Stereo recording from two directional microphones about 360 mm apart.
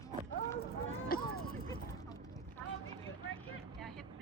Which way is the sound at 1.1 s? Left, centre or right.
Left.